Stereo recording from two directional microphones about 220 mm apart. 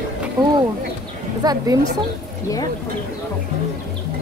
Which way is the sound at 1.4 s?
15° right (ahead or behind).